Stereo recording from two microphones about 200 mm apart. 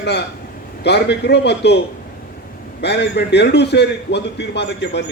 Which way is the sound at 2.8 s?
55° left (ahead or behind).